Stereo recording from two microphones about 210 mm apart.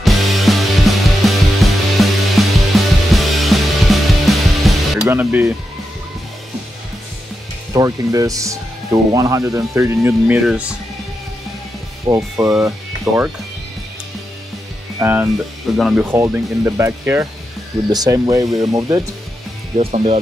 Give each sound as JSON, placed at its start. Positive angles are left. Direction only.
{"t": 0.0, "sound": "music", "side_deg": 0}
{"t": 7.7, "sound": "speech", "side_deg": -15}
{"t": 12.1, "sound": "speech", "side_deg": -15}
{"t": 15.0, "sound": "speech", "side_deg": -10}
{"t": 19.8, "sound": "speech", "side_deg": -30}